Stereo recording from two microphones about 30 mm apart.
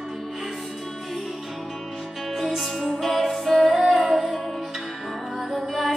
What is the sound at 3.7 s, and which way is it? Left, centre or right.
Music, centre.